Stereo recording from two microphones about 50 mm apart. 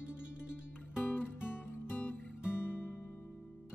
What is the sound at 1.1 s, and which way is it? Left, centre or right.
Music, left.